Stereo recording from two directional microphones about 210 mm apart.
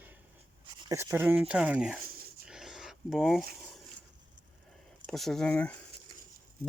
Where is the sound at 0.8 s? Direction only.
10° right (ahead or behind).